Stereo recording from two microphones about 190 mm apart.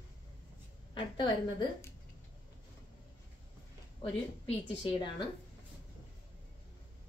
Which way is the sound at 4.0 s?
25° left (ahead or behind).